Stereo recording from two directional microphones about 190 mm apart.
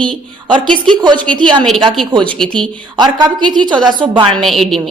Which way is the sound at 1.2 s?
5° left (ahead or behind).